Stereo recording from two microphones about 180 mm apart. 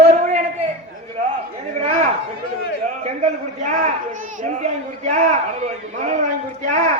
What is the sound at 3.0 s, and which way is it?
A man's voice, 40° right (ahead or behind).